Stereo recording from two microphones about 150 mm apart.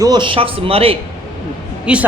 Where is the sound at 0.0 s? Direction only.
30° right (ahead or behind).